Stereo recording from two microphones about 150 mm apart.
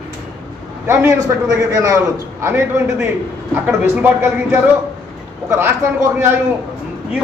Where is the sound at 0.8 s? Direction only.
20° right (ahead or behind).